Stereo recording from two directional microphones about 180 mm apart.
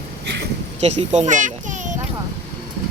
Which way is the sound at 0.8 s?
35° right (ahead or behind).